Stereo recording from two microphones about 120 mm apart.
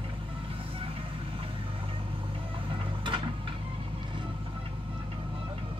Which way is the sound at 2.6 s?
45° right (ahead or behind).